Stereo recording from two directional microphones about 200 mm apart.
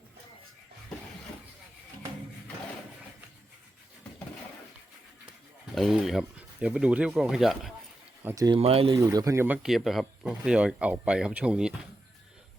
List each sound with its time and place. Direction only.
5.7 s speech: centre (ahead or behind)
8.4 s speech: 30° right (ahead or behind)
9.0 s speech: 15° right (ahead or behind)